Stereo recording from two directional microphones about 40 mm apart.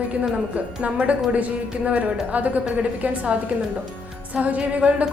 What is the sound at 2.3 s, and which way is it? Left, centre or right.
A woman's voice, right.